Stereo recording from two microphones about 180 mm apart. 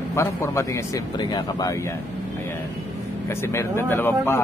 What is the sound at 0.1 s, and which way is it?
Speech, 15° left (ahead or behind).